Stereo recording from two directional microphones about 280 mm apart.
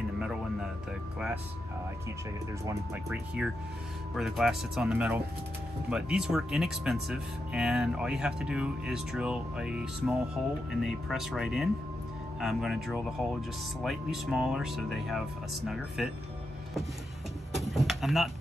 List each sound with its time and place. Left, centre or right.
2.6 s speech: centre
17.6 s speech: centre